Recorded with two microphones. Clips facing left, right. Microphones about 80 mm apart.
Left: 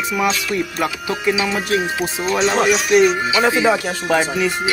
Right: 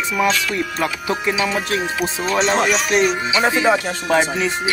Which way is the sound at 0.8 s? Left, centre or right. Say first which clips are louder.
Even; right.